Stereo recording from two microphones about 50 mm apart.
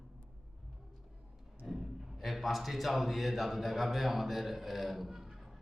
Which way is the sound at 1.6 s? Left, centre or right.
Centre.